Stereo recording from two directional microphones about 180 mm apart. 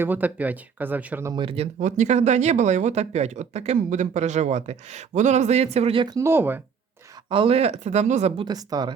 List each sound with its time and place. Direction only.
0.0 s speech: 10° right (ahead or behind)
1.3 s speech: 30° right (ahead or behind)
6.1 s speech: 15° right (ahead or behind)
7.3 s speech: 30° right (ahead or behind)
8.4 s speech: 20° right (ahead or behind)